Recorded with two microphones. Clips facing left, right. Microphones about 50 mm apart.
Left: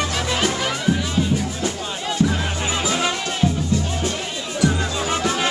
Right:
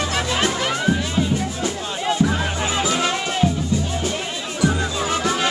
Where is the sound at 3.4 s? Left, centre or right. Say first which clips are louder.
Even; centre.